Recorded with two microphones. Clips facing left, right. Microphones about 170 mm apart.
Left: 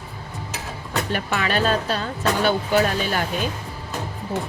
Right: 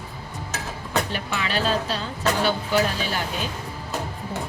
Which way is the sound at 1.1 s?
55° left (ahead or behind).